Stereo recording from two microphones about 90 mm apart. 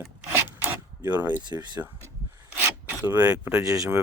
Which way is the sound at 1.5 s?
55° right (ahead or behind).